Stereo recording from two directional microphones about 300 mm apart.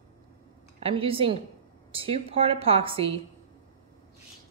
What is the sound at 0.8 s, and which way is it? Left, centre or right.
A woman's voice, centre.